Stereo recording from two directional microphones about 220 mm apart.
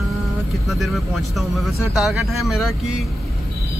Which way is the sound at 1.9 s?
Centre (ahead or behind).